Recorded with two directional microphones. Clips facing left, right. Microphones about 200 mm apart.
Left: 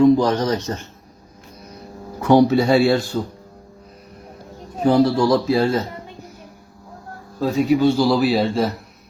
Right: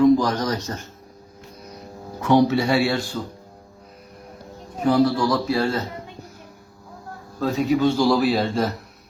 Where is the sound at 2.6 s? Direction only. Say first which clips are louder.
Left 5 dB; 35° left (ahead or behind).